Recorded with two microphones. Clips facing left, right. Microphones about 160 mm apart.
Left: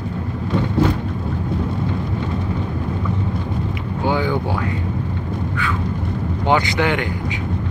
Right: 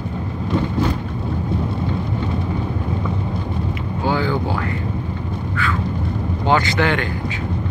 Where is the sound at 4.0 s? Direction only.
15° left (ahead or behind).